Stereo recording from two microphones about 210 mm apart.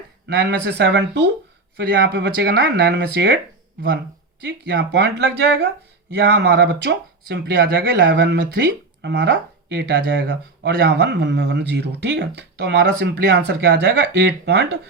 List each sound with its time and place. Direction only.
0.3 s speech: 55° right (ahead or behind)